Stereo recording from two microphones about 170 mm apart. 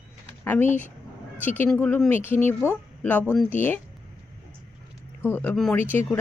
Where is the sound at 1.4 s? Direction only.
10° left (ahead or behind).